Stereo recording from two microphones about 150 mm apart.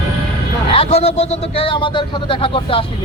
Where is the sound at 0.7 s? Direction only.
40° left (ahead or behind).